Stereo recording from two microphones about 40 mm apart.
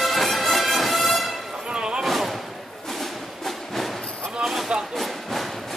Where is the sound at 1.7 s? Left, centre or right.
Right.